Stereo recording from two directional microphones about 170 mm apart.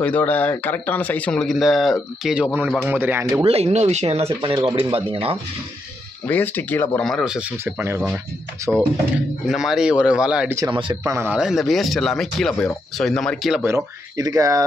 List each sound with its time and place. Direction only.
0.0 s speech: 10° left (ahead or behind); by 3.4 s 15° right (ahead or behind)
3.4 s speech: 35° right (ahead or behind)
6.2 s speech: 10° left (ahead or behind); by 8.8 s 20° right (ahead or behind)
9.5 s speech: centre (ahead or behind)
10.7 s speech: 30° right (ahead or behind)
11.1 s speech: 15° right (ahead or behind)
13.6 s speech: 15° right (ahead or behind)